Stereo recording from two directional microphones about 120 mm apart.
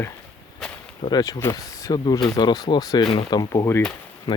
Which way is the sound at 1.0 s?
35° left (ahead or behind).